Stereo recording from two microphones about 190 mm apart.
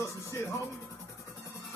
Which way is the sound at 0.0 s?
15° left (ahead or behind).